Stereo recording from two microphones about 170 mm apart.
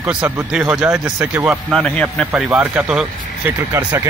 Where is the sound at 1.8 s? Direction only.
5° left (ahead or behind).